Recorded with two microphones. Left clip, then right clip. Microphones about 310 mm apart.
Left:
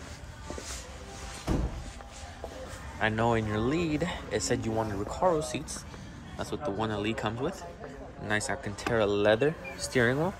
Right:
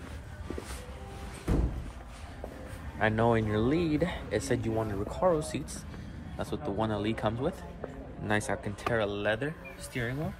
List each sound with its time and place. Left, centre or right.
3.0 s speech: centre
8.9 s speech: centre